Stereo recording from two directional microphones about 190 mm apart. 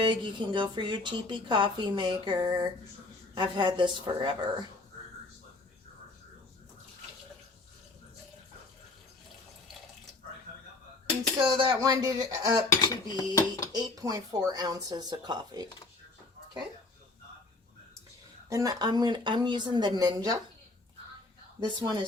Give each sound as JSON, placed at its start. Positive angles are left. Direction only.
{"t": 0.0, "sound": "speech", "side_deg": -25}
{"t": 11.4, "sound": "speech", "side_deg": -25}
{"t": 13.1, "sound": "dishes", "side_deg": 20}
{"t": 13.7, "sound": "speech", "side_deg": -20}
{"t": 18.4, "sound": "speech", "side_deg": -15}
{"t": 21.8, "sound": "speech", "side_deg": -20}